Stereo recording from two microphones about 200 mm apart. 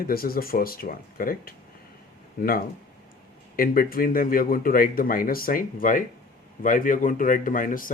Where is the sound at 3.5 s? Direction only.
45° left (ahead or behind).